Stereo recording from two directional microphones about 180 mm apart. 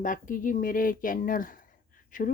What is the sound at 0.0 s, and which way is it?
Speech, 45° left (ahead or behind).